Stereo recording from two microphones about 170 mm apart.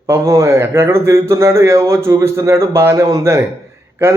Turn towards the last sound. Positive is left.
turn(degrees=-15)  # may be behind; listen again after turning